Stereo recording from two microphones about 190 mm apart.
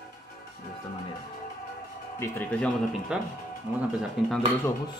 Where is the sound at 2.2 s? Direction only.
5° left (ahead or behind).